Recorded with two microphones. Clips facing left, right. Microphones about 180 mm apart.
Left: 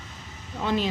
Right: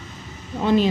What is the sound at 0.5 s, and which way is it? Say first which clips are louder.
Speech: right 7 dB; 35° right (ahead or behind).